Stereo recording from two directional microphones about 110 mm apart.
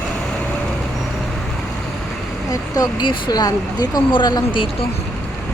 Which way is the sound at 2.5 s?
35° left (ahead or behind).